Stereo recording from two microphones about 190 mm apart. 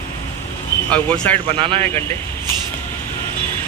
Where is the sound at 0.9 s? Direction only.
5° left (ahead or behind).